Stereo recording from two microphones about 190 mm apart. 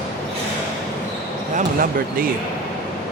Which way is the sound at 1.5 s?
50° right (ahead or behind).